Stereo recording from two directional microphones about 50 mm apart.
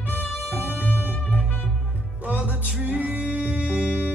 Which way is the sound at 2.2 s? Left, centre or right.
Right.